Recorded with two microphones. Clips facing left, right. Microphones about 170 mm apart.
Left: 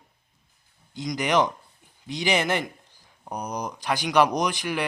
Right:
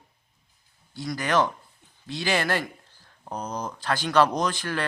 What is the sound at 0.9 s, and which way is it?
A man's voice, 20° left (ahead or behind).